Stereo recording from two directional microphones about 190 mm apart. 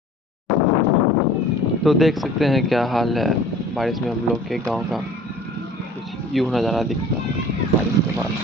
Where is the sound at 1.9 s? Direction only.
Centre (ahead or behind).